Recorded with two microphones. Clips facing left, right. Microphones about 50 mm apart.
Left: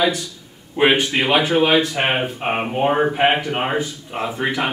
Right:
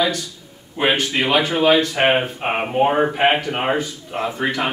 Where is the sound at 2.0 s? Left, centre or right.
Centre.